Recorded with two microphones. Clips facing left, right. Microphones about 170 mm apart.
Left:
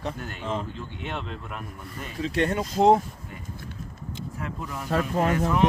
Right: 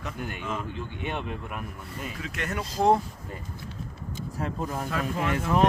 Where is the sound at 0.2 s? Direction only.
15° right (ahead or behind).